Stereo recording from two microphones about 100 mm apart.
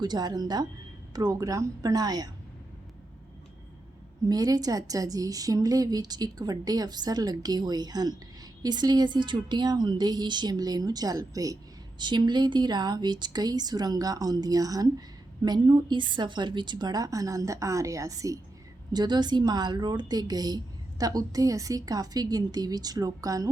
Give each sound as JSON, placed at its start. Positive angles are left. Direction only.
{"t": 0.0, "sound": "a woman's voice", "side_deg": -45}
{"t": 4.3, "sound": "a woman's voice", "side_deg": -40}
{"t": 11.9, "sound": "a woman's voice", "side_deg": -50}
{"t": 18.9, "sound": "a woman's voice", "side_deg": -45}